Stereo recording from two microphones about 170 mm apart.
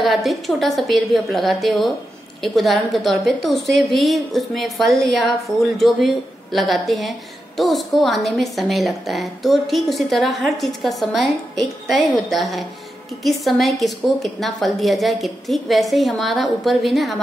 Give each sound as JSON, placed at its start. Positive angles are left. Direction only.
{"t": 0.0, "sound": "a woman's voice", "side_deg": 0}